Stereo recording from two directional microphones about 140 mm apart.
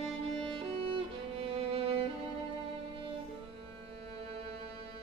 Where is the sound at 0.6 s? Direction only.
40° right (ahead or behind).